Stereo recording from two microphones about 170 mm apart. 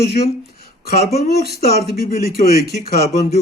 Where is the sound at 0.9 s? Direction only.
60° left (ahead or behind).